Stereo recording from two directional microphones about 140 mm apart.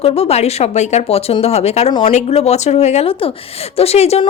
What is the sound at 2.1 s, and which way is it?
A woman's voice, 50° left (ahead or behind).